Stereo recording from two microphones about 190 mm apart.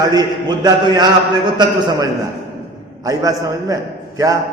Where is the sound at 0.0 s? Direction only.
20° right (ahead or behind).